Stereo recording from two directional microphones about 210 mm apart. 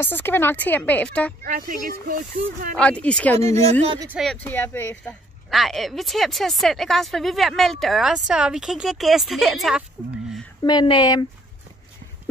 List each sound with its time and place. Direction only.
0.0 s a woman's voice: 10° left (ahead or behind)
1.4 s speech: 40° right (ahead or behind)
2.7 s speech: 5° left (ahead or behind)
3.3 s speech: 30° right (ahead or behind)
4.1 s a woman's voice: centre (ahead or behind)
10.6 s speech: 20° left (ahead or behind)